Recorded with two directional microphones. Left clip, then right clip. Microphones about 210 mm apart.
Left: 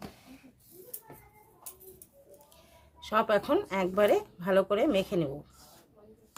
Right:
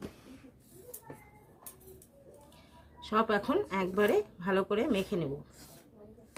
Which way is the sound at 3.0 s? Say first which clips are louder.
Left 3 dB; 55° left (ahead or behind).